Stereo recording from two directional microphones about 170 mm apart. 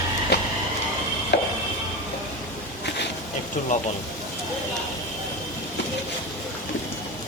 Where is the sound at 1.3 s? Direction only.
85° left.